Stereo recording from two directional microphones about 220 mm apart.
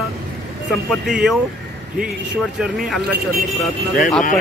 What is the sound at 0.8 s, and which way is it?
Speech, centre (ahead or behind).